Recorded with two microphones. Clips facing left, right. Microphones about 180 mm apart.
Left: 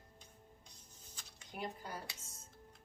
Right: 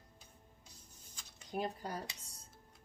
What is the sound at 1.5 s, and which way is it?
Dishes, 35° right (ahead or behind).